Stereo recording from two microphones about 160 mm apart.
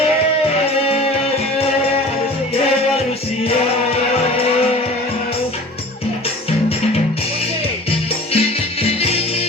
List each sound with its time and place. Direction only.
7.9 s music: 35° left (ahead or behind)